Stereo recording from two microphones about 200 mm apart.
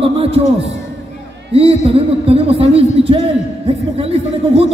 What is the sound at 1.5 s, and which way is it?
Speech, 30° right (ahead or behind).